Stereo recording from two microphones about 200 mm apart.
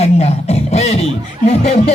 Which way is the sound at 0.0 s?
30° left (ahead or behind).